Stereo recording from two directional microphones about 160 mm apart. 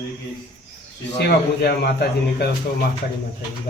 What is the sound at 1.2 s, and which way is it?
A man's voice, 90° left.